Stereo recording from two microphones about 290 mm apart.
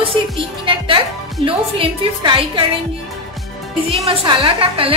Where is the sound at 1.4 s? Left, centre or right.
Centre.